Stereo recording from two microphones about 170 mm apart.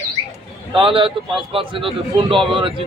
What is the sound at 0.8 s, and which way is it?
Speech, 30° right (ahead or behind).